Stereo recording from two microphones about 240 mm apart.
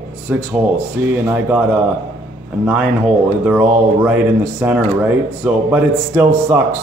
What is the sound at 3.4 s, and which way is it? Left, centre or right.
Speech, centre.